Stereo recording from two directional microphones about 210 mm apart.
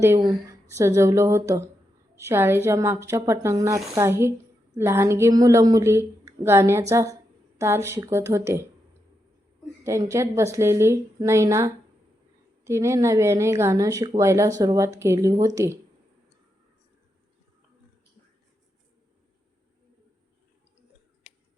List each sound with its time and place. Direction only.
0.0 s a woman's voice: 15° right (ahead or behind)
9.8 s a woman's voice: 15° right (ahead or behind)